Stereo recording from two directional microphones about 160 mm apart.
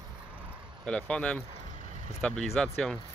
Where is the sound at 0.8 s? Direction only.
5° left (ahead or behind).